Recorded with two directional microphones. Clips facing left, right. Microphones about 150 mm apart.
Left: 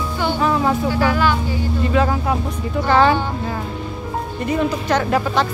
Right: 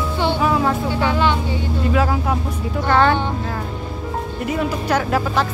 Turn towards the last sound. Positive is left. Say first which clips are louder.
# left 1 dB
turn(degrees=0)  # may be behind; listen again after turning